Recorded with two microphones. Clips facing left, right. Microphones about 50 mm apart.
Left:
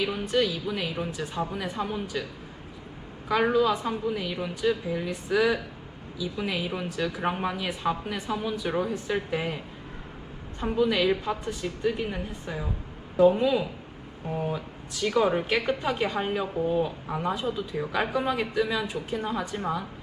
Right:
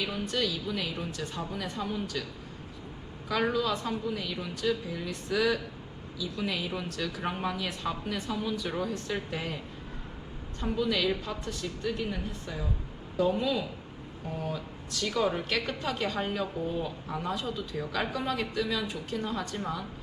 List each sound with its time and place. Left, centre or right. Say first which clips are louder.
0.0 s a woman's voice: left 5 dB; centre
3.2 s a woman's voice: left 5 dB; centre
10.6 s a woman's voice: left 5 dB; centre